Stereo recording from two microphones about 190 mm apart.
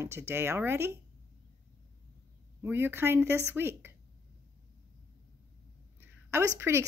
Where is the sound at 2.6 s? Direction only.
10° right (ahead or behind).